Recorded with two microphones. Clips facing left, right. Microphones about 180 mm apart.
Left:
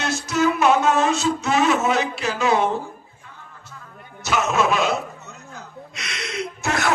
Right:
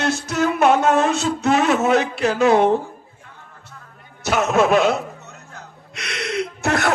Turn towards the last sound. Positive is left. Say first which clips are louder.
# right 3 dB
turn(degrees=-60)  # may be behind; listen again after turning